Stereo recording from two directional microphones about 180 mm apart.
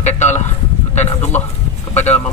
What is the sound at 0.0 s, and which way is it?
Speech, 40° left (ahead or behind).